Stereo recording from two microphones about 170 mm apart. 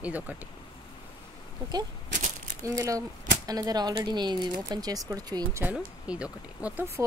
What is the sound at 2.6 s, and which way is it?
Speech, 20° right (ahead or behind).